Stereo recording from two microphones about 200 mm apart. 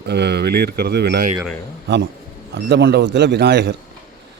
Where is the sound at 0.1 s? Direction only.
55° right (ahead or behind).